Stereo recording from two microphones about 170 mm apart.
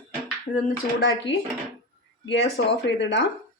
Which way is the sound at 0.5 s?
55° left (ahead or behind).